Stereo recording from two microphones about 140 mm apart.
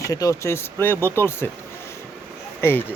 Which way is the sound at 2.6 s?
15° left (ahead or behind).